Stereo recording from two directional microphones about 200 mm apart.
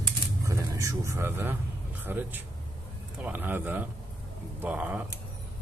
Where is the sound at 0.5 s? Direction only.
15° right (ahead or behind).